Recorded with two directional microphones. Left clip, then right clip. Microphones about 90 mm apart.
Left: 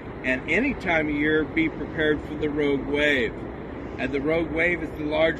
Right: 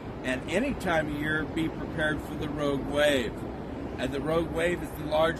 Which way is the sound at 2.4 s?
60° right (ahead or behind).